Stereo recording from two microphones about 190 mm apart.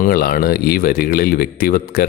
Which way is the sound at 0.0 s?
50° left (ahead or behind).